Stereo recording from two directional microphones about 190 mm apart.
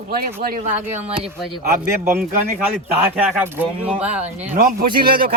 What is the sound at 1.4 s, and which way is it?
Speech, centre (ahead or behind).